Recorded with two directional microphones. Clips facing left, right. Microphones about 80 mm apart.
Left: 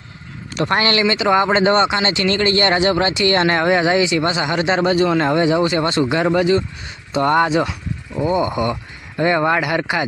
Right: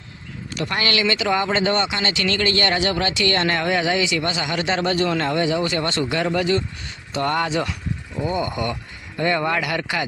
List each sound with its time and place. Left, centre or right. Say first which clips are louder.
0.5 s speech: left 6 dB; left